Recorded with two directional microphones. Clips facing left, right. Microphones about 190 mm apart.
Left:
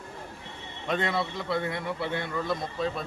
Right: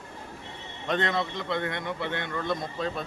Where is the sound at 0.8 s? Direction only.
5° left (ahead or behind).